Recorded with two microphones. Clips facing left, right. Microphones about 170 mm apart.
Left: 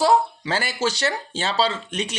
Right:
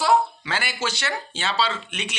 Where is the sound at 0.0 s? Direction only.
35° left (ahead or behind).